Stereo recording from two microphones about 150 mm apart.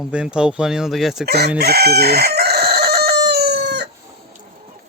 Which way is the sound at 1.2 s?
90° right.